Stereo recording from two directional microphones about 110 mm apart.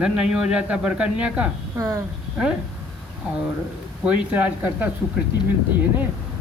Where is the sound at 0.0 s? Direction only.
5° right (ahead or behind).